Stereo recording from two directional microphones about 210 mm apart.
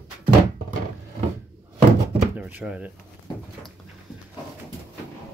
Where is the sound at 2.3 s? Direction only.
10° right (ahead or behind).